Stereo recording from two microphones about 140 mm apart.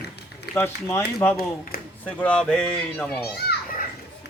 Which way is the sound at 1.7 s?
90° left.